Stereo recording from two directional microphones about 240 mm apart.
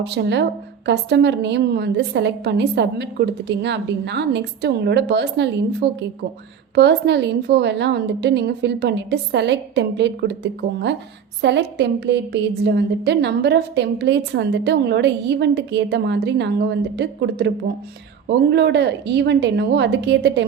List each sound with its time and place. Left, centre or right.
0.0 s a woman's voice: right